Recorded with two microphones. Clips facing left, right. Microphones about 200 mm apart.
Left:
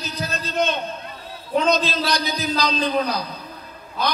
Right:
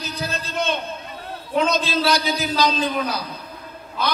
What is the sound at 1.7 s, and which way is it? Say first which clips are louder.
Speech: even; 40° left (ahead or behind).